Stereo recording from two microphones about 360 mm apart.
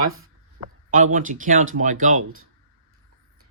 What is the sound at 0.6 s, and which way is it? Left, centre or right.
Speech, right.